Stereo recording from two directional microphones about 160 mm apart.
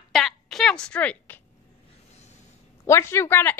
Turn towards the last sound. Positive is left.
turn(degrees=15)  # may be behind; listen again after turning